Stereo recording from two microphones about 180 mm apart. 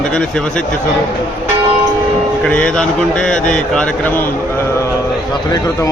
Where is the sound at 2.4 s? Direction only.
5° left (ahead or behind).